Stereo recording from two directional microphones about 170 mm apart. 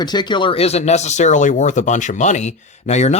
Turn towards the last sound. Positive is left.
turn(degrees=40)  # may be behind; listen again after turning